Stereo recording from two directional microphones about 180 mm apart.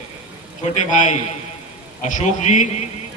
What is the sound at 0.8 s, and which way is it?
A man's voice, 40° left (ahead or behind).